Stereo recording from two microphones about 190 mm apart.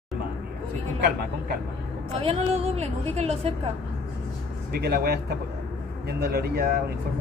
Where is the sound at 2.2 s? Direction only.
30° right (ahead or behind).